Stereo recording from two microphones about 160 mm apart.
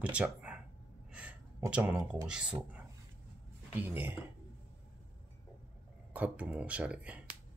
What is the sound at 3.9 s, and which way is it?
Speech, 15° right (ahead or behind).